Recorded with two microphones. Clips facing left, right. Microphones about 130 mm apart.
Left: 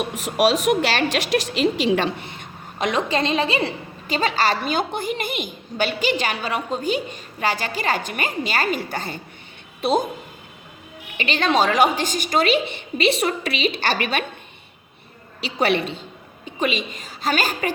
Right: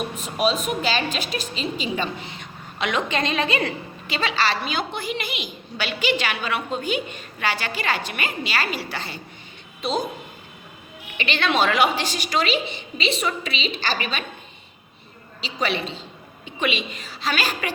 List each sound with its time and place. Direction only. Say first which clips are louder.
0.1 s a woman's voice: left 7 dB; 90° left; by 2.8 s 55° left (ahead or behind)
2.8 s a woman's voice: left 3 dB; 35° left (ahead or behind)
4.0 s a woman's voice: left 3 dB; 45° left (ahead or behind)
11.2 s a woman's voice: left 2 dB; 40° left (ahead or behind); by 14.3 s 60° left (ahead or behind)
15.4 s a woman's voice: left 5 dB; 60° left (ahead or behind)
16.6 s a woman's voice: left 2 dB; 40° left (ahead or behind)